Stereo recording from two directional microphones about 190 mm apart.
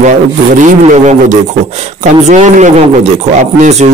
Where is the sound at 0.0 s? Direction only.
40° right (ahead or behind).